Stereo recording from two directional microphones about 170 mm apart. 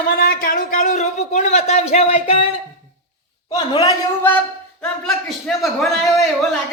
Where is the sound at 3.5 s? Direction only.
25° left (ahead or behind).